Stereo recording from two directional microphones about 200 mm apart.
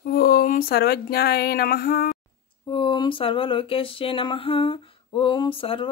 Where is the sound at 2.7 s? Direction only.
25° left (ahead or behind).